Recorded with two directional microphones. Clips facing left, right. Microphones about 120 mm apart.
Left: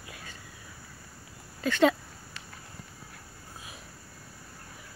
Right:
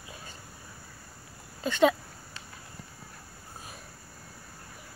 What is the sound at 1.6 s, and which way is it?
Speech, 20° right (ahead or behind).